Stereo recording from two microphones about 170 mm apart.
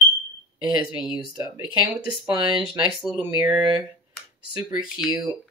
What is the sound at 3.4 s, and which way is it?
Speech, 25° right (ahead or behind).